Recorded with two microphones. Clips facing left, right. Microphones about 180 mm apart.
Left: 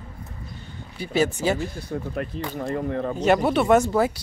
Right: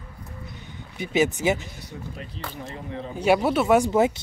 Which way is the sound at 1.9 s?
60° left (ahead or behind).